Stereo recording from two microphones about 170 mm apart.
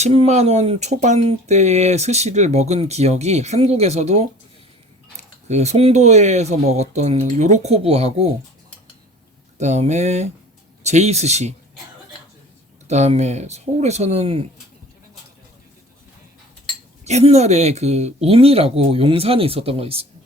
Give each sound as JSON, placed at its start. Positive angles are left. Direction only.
{"t": 0.0, "sound": "speech", "side_deg": -40}
{"t": 9.6, "sound": "speech", "side_deg": -40}
{"t": 12.9, "sound": "speech", "side_deg": -40}
{"t": 17.0, "sound": "speech", "side_deg": -40}